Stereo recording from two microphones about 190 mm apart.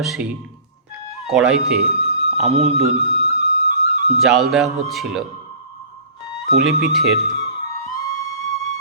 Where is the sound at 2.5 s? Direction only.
30° right (ahead or behind).